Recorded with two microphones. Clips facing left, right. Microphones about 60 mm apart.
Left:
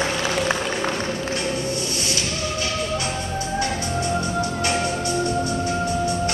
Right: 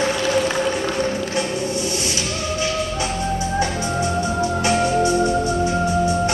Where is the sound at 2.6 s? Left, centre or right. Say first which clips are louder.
Right 3 dB; right.